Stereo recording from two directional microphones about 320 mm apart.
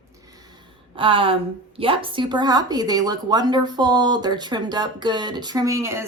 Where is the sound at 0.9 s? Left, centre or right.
Centre.